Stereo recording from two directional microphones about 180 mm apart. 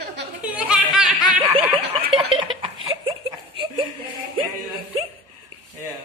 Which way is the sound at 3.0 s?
30° right (ahead or behind).